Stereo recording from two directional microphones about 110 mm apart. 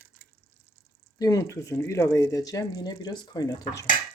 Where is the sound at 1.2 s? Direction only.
30° left (ahead or behind).